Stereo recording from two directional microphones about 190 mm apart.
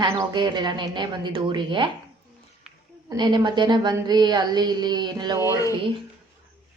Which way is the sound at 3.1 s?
25° right (ahead or behind).